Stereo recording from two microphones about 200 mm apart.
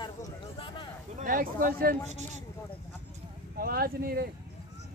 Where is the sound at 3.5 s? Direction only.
45° right (ahead or behind).